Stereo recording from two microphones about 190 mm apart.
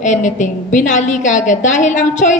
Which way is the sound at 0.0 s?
40° left (ahead or behind).